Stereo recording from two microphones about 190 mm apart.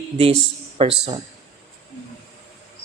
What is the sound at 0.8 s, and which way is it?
Speech, 25° right (ahead or behind).